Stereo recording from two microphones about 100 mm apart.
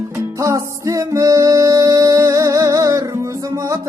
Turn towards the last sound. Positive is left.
turn(degrees=-35)  # may be behind; listen again after turning